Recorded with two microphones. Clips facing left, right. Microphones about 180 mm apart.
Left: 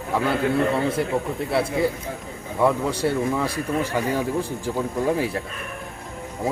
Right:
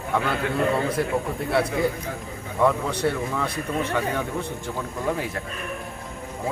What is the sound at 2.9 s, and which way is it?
A man's voice, 30° left (ahead or behind).